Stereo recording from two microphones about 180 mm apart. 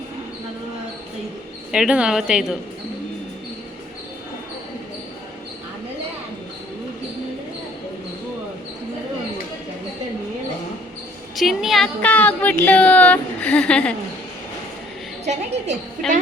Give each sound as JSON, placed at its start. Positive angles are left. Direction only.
{"t": 1.7, "sound": "a woman's voice", "side_deg": -5}
{"t": 11.3, "sound": "speech", "side_deg": 0}
{"t": 15.2, "sound": "a woman's voice", "side_deg": -40}
{"t": 16.0, "sound": "a woman's voice", "side_deg": 0}